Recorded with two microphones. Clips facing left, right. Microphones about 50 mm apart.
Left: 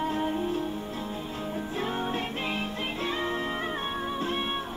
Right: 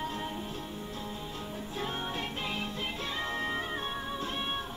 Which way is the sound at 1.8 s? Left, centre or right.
Left.